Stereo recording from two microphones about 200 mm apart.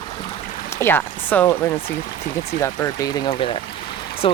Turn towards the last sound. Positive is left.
turn(degrees=25)  # may be behind; listen again after turning